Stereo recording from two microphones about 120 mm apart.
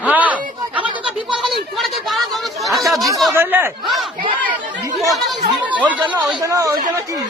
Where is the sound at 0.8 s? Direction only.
45° right (ahead or behind).